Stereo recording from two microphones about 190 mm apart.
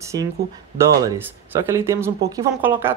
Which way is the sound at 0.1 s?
20° right (ahead or behind).